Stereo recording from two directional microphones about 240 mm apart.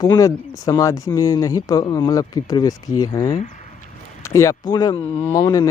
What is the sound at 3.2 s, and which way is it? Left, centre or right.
Speech, left.